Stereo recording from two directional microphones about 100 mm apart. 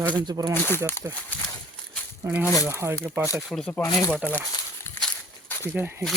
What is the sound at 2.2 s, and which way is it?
Speech, 20° right (ahead or behind).